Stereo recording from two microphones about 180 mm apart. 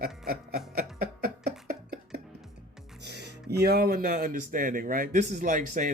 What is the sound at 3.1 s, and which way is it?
Speech, 65° right (ahead or behind).